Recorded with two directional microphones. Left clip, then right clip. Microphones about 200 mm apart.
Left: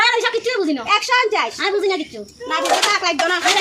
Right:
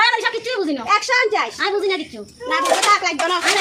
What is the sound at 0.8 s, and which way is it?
Speech, 30° left (ahead or behind).